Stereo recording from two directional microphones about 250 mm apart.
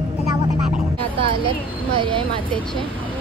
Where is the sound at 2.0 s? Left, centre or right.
Right.